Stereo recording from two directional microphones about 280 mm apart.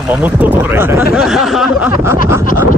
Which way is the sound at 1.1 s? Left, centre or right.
Centre.